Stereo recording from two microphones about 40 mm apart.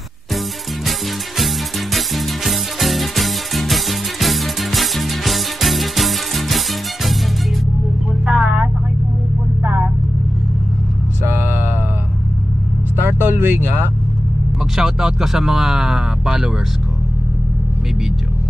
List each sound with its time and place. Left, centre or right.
2.0 s music: centre
8.3 s vehicle: centre
9.6 s vehicle: right
13.0 s vehicle: right
14.8 s a sound: centre